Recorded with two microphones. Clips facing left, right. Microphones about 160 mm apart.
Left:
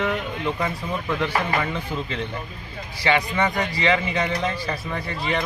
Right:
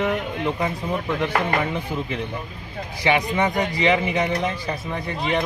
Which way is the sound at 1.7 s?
15° right (ahead or behind).